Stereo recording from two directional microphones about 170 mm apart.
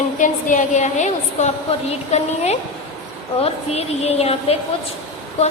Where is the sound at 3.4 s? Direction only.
40° left (ahead or behind).